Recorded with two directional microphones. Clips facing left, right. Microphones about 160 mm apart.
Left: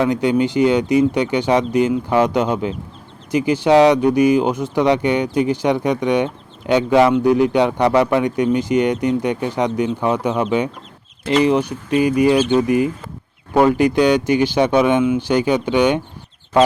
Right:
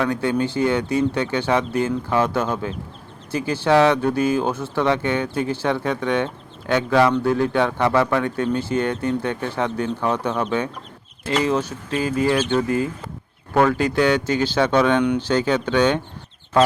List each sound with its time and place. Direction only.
0.0 s speech: 15° left (ahead or behind)